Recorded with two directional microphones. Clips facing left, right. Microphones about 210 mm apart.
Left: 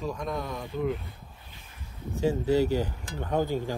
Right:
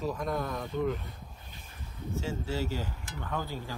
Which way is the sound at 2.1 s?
15° left (ahead or behind).